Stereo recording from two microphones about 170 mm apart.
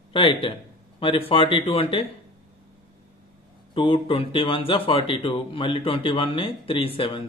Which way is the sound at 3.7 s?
30° left (ahead or behind).